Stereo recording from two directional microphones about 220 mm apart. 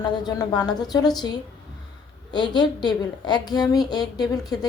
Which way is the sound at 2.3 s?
20° left (ahead or behind).